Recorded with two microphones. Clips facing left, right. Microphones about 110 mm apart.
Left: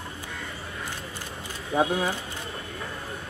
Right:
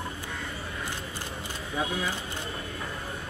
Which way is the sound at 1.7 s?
35° left (ahead or behind).